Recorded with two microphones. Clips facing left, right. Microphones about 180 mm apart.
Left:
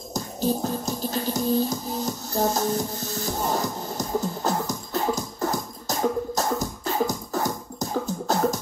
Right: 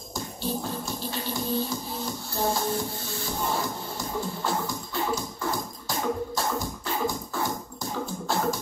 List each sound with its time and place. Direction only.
0.1 s music: 40° left (ahead or behind)